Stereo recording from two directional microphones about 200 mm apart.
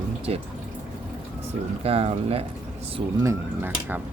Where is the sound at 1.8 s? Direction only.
30° right (ahead or behind).